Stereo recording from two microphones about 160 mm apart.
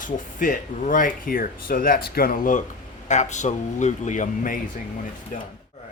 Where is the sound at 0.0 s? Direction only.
55° left (ahead or behind).